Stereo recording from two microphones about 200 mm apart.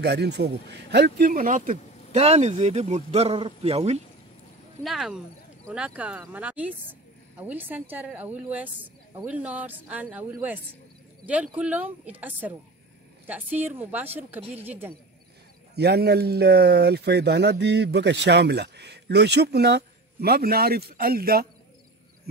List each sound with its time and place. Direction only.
0.0 s speech: 60° right (ahead or behind); by 4.0 s 30° right (ahead or behind)
4.8 s speech: centre (ahead or behind)
15.7 s speech: 55° right (ahead or behind)